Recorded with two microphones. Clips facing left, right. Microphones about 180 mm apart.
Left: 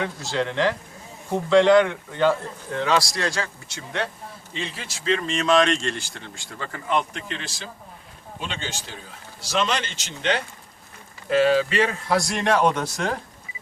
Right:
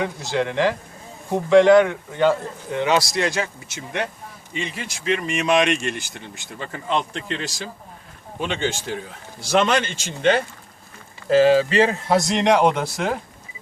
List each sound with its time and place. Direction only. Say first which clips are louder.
0.0 s speech: right 3 dB; 10° right (ahead or behind)
2.8 s a man's voice: right 3 dB; 20° right (ahead or behind); by 7.5 s 35° right (ahead or behind)
8.4 s a man's voice: right 8 dB; 55° right (ahead or behind)
11.3 s a man's voice: right 4 dB; 30° right (ahead or behind); by 13.1 s 10° right (ahead or behind)